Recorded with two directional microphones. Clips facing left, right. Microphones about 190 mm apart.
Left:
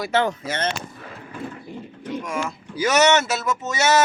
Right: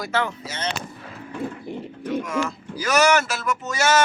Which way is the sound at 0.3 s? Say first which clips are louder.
Left 5 dB; 55° left (ahead or behind).